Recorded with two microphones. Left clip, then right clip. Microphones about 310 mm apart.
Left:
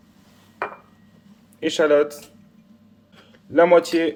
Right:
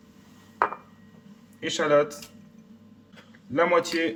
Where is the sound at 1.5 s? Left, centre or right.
Left.